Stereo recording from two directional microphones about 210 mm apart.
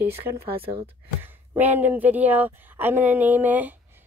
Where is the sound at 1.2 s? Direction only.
10° right (ahead or behind).